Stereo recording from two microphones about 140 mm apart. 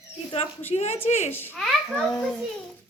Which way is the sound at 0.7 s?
45° left (ahead or behind).